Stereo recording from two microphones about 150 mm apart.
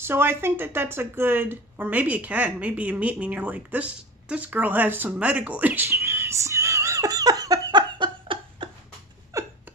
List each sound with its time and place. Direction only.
0.0 s speech: 15° right (ahead or behind); by 8.6 s 35° right (ahead or behind)
9.3 s hiccup: 20° right (ahead or behind)